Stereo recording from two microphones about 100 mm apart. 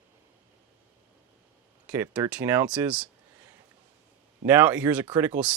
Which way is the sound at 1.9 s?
15° right (ahead or behind).